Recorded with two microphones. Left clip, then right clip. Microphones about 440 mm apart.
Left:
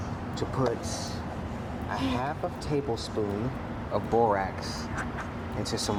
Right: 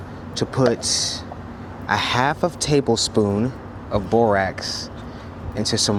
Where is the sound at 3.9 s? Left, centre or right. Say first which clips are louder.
Right 7 dB; right.